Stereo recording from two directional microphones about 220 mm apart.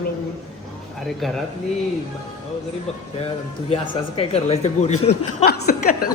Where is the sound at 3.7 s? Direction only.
25° left (ahead or behind).